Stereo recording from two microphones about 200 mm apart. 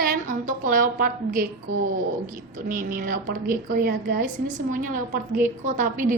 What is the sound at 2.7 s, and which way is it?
A woman's voice, 45° right (ahead or behind).